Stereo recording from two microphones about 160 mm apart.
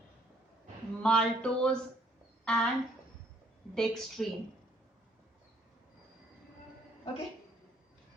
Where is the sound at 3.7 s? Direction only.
Centre (ahead or behind).